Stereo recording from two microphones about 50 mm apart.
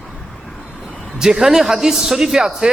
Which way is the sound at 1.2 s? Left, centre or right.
Centre.